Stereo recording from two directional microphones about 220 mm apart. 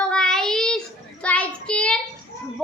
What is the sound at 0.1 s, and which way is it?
Child singing, 5° left (ahead or behind).